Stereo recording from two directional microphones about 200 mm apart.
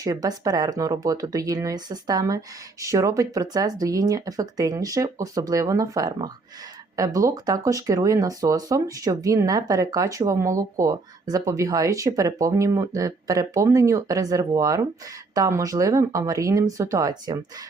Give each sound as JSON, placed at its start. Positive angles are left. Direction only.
{"t": 0.0, "sound": "speech", "side_deg": -20}